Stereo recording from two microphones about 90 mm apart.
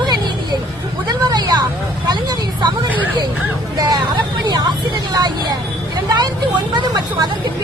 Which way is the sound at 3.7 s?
50° right (ahead or behind).